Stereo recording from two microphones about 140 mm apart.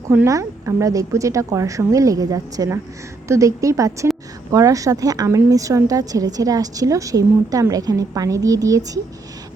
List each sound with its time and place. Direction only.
0.1 s a woman's voice: 20° right (ahead or behind)